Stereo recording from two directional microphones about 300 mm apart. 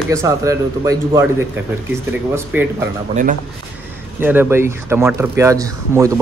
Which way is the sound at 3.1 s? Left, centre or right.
Right.